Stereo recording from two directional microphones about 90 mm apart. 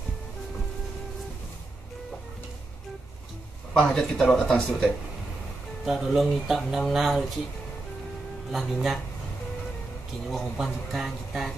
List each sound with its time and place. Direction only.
3.7 s speech: 10° left (ahead or behind)
8.5 s speech: 5° right (ahead or behind)
10.2 s speech: centre (ahead or behind)